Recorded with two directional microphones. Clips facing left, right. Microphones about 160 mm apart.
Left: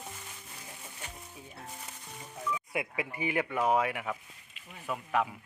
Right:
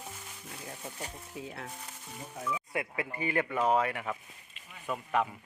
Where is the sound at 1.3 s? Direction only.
90° right.